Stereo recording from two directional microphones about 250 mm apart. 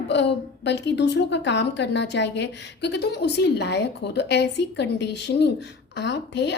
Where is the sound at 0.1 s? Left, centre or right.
Left.